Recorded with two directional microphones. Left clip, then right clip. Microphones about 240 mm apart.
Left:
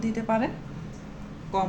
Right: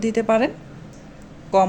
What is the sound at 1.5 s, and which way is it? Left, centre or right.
Speech, right.